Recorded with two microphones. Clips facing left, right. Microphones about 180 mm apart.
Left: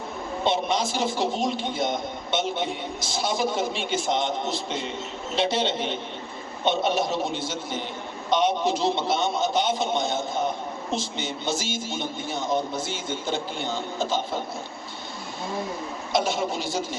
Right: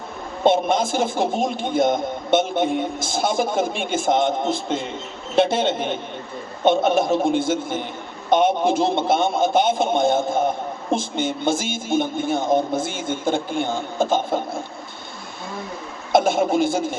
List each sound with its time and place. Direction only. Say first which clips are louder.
0.4 s a man's voice: right 7 dB; 50° right (ahead or behind)
16.1 s a man's voice: right 8 dB; 50° right (ahead or behind)